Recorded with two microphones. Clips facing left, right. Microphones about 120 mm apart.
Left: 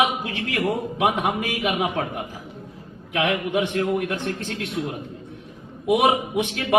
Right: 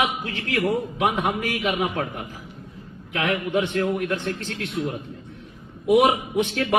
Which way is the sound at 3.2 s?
15° left (ahead or behind).